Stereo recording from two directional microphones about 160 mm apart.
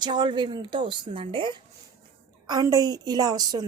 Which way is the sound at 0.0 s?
30° right (ahead or behind).